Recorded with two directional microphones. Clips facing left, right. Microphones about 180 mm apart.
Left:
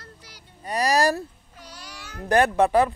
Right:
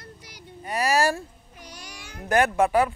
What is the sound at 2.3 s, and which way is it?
Speech, 35° left (ahead or behind).